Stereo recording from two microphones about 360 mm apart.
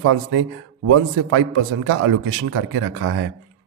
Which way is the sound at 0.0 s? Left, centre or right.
Right.